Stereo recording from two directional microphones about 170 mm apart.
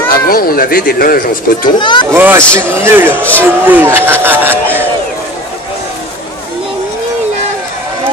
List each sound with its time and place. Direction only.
0.3 s speech: 60° left (ahead or behind)
1.8 s speech: 30° left (ahead or behind)
2.1 s speech: 10° right (ahead or behind)